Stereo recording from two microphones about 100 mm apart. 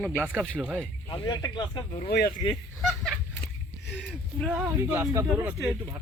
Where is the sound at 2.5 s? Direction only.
Centre (ahead or behind).